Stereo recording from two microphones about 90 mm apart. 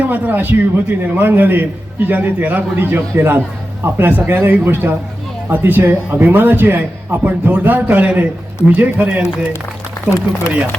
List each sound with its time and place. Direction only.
0.0 s a man's voice: 20° right (ahead or behind)